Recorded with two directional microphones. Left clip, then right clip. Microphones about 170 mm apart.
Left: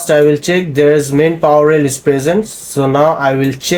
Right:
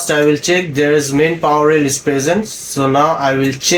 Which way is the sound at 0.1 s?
90° left.